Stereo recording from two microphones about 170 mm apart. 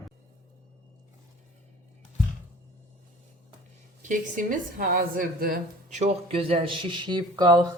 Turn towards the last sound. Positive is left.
turn(degrees=-25)  # may be behind; listen again after turning